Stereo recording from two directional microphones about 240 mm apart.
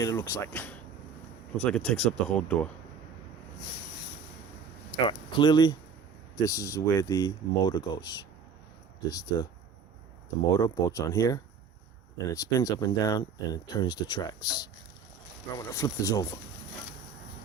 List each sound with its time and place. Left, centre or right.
0.0 s speech: centre
5.0 s speech: centre
10.6 s speech: centre